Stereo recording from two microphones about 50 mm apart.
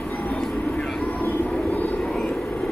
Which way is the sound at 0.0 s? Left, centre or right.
Left.